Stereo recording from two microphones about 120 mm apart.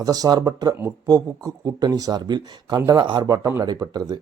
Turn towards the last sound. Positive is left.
turn(degrees=-35)  # may be behind; listen again after turning